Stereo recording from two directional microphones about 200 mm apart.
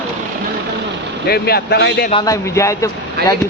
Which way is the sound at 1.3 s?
50° left (ahead or behind).